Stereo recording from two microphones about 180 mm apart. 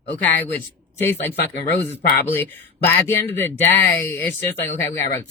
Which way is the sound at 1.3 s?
65° left (ahead or behind).